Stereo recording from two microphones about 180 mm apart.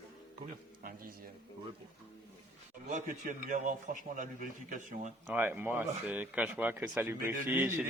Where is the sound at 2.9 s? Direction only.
40° right (ahead or behind).